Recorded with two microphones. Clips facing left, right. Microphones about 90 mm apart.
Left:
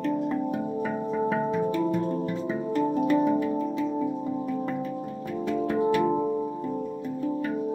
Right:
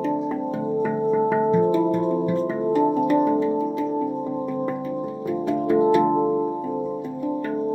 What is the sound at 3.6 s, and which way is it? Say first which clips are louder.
Music: right 4 dB; 5° right (ahead or behind).